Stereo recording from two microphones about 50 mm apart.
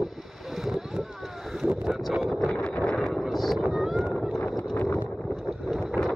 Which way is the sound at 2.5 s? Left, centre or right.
Left.